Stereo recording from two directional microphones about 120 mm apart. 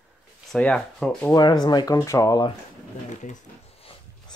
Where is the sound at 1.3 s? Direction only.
35° left (ahead or behind).